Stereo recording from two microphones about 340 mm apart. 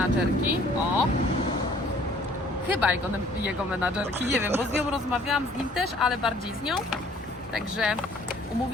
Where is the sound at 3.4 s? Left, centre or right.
Centre.